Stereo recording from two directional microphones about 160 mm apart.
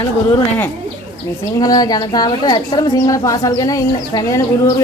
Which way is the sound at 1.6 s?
25° left (ahead or behind).